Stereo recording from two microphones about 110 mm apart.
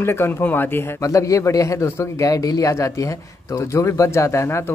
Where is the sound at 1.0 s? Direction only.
30° left (ahead or behind).